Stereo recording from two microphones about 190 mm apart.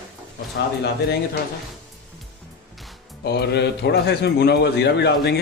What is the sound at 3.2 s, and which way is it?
A man's voice, 60° left (ahead or behind).